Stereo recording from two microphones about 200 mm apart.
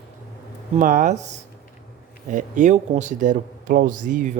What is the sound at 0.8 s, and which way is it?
Speech, 40° right (ahead or behind).